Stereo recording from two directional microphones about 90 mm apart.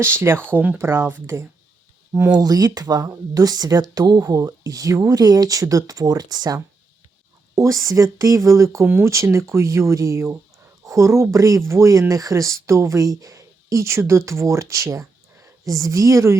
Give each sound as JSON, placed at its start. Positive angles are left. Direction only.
{"t": 0.0, "sound": "speech", "side_deg": -25}
{"t": 2.3, "sound": "speech", "side_deg": -45}